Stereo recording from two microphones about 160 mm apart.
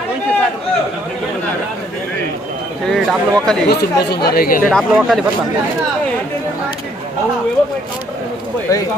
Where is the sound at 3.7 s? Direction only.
85° left; by 4.7 s 60° left (ahead or behind).